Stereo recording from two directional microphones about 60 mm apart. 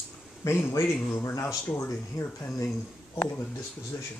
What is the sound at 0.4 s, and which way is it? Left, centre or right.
Speech, left.